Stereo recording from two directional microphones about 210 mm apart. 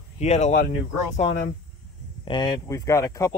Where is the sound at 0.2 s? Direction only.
30° left (ahead or behind).